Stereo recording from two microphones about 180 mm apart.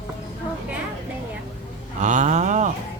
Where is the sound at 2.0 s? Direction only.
40° right (ahead or behind).